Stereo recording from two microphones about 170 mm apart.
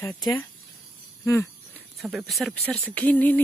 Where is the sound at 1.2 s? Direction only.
15° left (ahead or behind).